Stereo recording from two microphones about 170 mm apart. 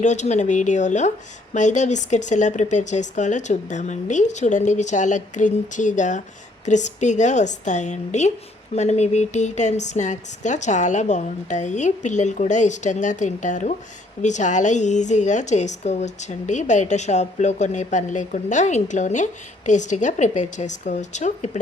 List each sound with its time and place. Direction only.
0.0 s a woman's voice: 45° left (ahead or behind)